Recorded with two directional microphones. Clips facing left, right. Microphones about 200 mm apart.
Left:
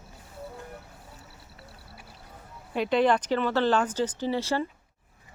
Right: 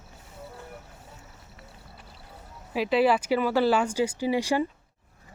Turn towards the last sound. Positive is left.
turn(degrees=-15)  # may be behind; listen again after turning